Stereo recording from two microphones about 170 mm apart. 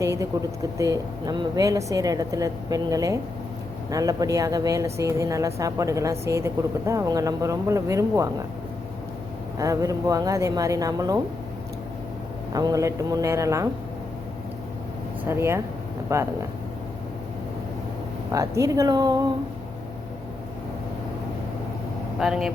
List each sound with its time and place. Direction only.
0.0 s speech: 20° right (ahead or behind)
9.6 s speech: 20° right (ahead or behind)
12.5 s speech: 20° right (ahead or behind)
15.3 s speech: 15° right (ahead or behind)
18.3 s speech: 20° right (ahead or behind)
22.2 s speech: centre (ahead or behind)